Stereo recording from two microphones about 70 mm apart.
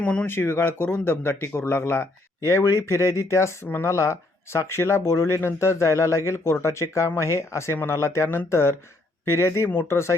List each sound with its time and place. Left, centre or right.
0.0 s speech: centre
0.3 s speech: left